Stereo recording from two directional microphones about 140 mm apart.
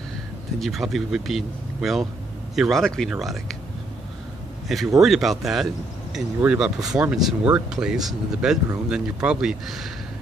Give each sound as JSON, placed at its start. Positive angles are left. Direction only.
{"t": 0.6, "sound": "speech", "side_deg": 0}
{"t": 4.6, "sound": "speech", "side_deg": 0}